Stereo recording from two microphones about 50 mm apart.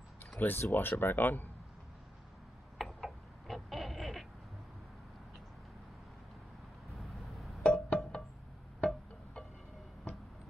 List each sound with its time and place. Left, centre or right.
0.4 s speech: left
2.8 s a sound: centre
6.9 s vehicle: centre
7.6 s music: left